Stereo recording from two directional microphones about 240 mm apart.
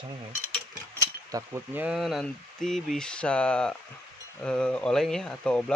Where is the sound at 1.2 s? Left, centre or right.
Centre.